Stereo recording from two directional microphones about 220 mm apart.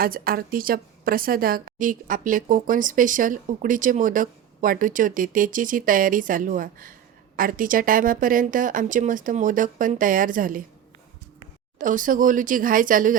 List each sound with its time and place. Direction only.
0.0 s a woman's voice: 40° right (ahead or behind)
11.8 s a woman's voice: 35° right (ahead or behind)